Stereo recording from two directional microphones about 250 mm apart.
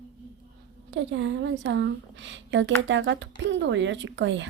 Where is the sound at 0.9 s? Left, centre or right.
Right.